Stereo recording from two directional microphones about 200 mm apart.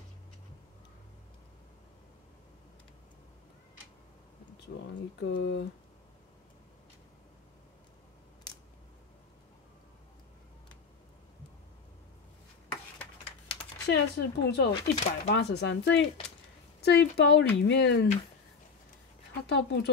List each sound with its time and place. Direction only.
4.7 s a sound: 65° left (ahead or behind)
5.2 s speech: 60° left (ahead or behind)
13.8 s speech: 55° left (ahead or behind)
14.7 s speech: 30° left (ahead or behind)
15.3 s speech: 60° left (ahead or behind)
19.4 s speech: 55° left (ahead or behind)